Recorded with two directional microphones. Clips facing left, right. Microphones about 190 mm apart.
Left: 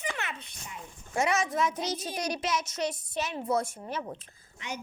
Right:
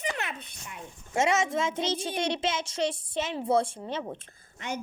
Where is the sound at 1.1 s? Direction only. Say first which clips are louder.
Right 2 dB; 25° right (ahead or behind).